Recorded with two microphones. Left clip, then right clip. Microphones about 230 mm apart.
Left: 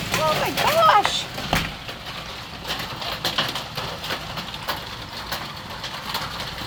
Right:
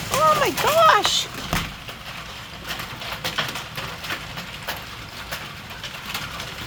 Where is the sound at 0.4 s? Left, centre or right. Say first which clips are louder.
Right 1 dB; right.